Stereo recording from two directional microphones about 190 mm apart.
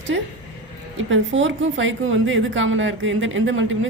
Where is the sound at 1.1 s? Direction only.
85° right.